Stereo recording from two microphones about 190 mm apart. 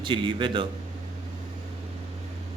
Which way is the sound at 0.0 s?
25° right (ahead or behind).